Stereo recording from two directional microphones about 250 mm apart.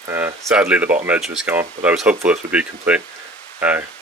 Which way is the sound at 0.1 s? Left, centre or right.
Centre.